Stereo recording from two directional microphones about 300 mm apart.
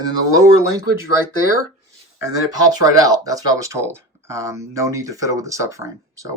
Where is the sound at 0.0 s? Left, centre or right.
Centre.